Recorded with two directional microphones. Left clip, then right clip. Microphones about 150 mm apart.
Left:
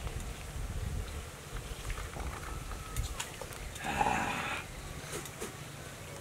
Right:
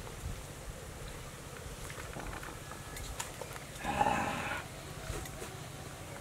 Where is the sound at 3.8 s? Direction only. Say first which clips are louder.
Even; 15° left (ahead or behind).